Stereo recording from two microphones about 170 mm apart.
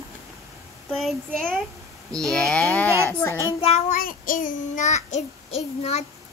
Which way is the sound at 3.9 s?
55° left (ahead or behind).